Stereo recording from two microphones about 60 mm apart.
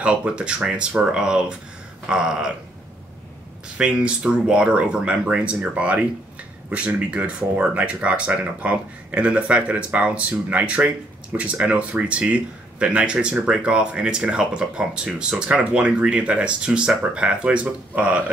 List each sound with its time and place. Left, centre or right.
0.0 s speech: right
3.7 s speech: centre